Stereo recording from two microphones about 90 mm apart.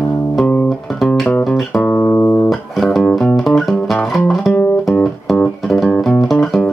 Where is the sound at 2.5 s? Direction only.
5° left (ahead or behind).